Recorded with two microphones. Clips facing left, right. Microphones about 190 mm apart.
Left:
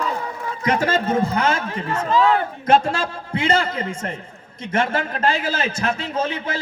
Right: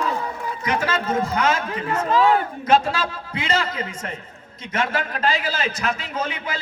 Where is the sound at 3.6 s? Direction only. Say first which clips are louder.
Left 3 dB; 30° left (ahead or behind).